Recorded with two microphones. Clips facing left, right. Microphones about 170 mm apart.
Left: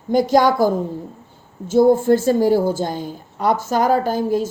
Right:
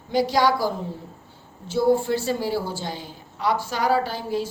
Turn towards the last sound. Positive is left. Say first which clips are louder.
# left 7 dB
turn(degrees=45)  # may be behind; listen again after turning